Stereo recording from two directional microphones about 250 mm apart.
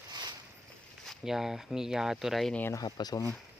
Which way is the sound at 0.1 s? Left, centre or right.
Centre.